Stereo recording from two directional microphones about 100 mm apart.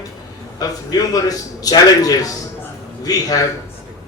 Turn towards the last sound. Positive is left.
turn(degrees=40)  # may be behind; listen again after turning